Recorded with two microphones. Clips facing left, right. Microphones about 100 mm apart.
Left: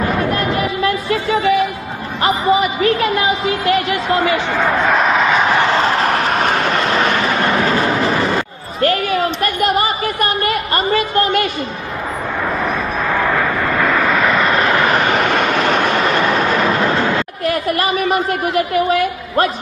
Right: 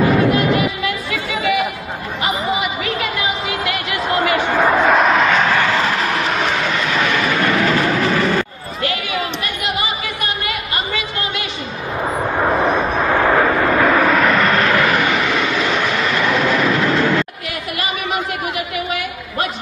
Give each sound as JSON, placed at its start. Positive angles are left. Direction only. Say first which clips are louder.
{"t": 0.3, "sound": "music", "louder": "right 2 dB", "side_deg": 40}
{"t": 2.2, "sound": "a sound", "louder": "left 6 dB", "side_deg": 35}
{"t": 4.5, "sound": "vehicle", "louder": "right 1 dB", "side_deg": -5}
{"t": 5.4, "sound": "vehicle", "louder": "left 2 dB", "side_deg": 20}
{"t": 5.8, "sound": "vehicle", "louder": "left 3 dB", "side_deg": 35}
{"t": 7.6, "sound": "a sound", "louder": "left 1 dB", "side_deg": 30}
{"t": 8.8, "sound": "a sound", "louder": "left 7 dB", "side_deg": 45}
{"t": 12.4, "sound": "vehicle", "louder": "right 4 dB", "side_deg": -30}
{"t": 13.3, "sound": "vehicle", "louder": "right 3 dB", "side_deg": -15}
{"t": 14.6, "sound": "vehicle", "louder": "left 1 dB", "side_deg": 20}
{"t": 15.0, "sound": "train", "louder": "left 3 dB", "side_deg": 50}
{"t": 17.5, "sound": "a woman's voice", "louder": "left 7 dB", "side_deg": 40}